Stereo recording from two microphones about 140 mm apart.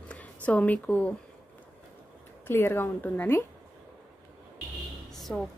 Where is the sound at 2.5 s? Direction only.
15° left (ahead or behind).